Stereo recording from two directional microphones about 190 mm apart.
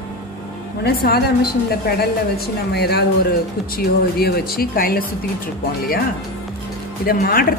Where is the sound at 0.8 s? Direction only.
55° left (ahead or behind).